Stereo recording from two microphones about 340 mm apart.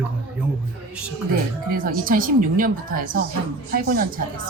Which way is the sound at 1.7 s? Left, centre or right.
Right.